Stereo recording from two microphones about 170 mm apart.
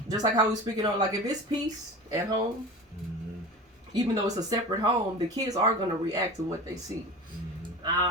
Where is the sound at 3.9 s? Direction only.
20° right (ahead or behind).